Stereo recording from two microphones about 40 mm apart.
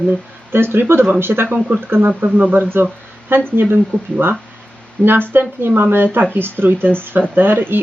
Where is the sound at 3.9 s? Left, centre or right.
Left.